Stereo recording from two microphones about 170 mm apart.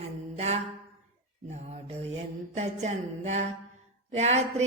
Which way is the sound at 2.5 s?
40° right (ahead or behind).